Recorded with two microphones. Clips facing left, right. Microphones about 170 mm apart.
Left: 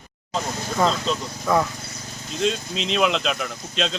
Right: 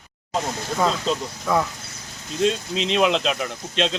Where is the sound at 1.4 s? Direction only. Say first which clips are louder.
Left 2 dB; centre (ahead or behind).